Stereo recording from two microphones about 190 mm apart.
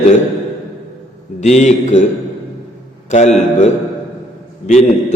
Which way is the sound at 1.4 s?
35° left (ahead or behind).